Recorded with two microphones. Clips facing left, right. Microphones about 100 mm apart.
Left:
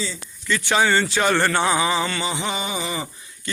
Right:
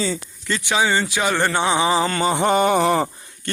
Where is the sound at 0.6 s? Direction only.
15° right (ahead or behind); by 3.5 s 55° right (ahead or behind).